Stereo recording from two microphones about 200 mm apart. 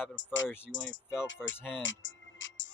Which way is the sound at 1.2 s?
70° left (ahead or behind).